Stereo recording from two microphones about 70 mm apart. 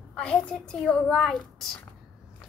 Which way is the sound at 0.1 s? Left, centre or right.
Centre.